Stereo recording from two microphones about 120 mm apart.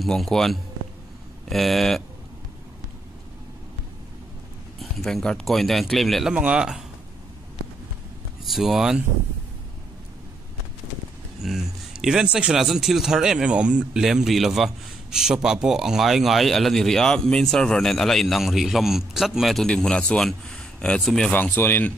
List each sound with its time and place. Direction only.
0.0 s speech: centre (ahead or behind)
4.7 s speech: centre (ahead or behind)
8.5 s speech: centre (ahead or behind)
11.4 s speech: 5° right (ahead or behind)
21.3 s speech: 15° left (ahead or behind)